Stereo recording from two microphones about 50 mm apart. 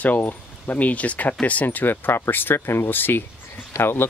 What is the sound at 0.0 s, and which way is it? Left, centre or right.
Speech, left.